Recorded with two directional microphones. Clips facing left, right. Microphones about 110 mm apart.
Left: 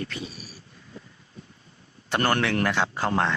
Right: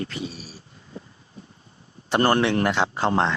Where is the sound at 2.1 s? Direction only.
25° right (ahead or behind).